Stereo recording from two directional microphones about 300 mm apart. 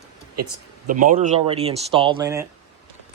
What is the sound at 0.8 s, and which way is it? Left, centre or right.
Speech, right.